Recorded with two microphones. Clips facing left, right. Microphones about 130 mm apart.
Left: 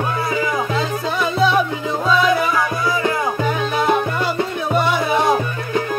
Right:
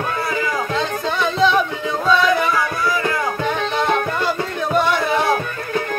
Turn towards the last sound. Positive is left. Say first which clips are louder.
# left 1 dB
turn(degrees=15)  # may be behind; listen again after turning